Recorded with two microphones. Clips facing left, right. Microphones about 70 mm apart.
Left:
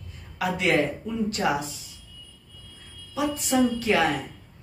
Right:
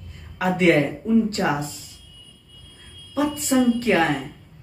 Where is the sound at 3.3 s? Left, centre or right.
Right.